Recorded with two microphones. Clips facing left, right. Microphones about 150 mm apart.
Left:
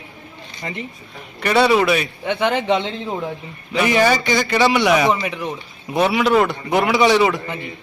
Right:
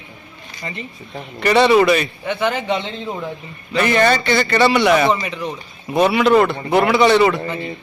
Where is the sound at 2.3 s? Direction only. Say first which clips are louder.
Left 2 dB; 20° left (ahead or behind).